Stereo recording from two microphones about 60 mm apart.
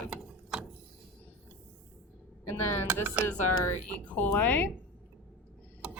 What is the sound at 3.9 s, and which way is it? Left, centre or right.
Speech, left.